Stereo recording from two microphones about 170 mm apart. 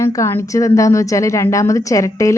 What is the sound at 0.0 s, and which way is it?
A woman's voice, 15° left (ahead or behind).